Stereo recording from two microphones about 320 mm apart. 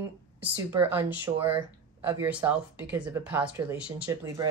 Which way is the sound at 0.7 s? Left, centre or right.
Centre.